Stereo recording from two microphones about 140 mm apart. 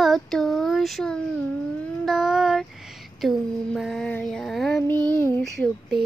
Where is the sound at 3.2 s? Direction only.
Centre (ahead or behind).